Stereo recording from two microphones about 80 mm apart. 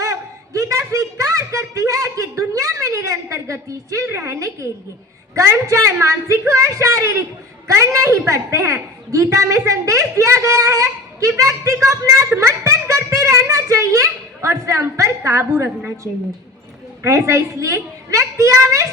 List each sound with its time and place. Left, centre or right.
0.0 s a sound: right
5.3 s a woman's voice: right
17.0 s a woman's voice: right